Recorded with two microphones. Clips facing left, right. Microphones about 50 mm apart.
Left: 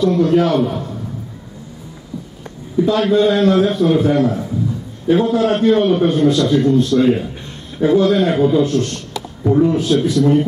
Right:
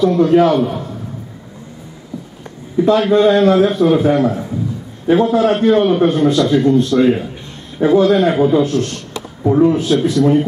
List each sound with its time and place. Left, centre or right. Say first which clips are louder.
0.0 s a man's voice: right 3 dB; centre
2.8 s a man's voice: right 2 dB; centre
9.4 s speech: right 2 dB; centre
9.7 s a man's voice: right 1 dB; centre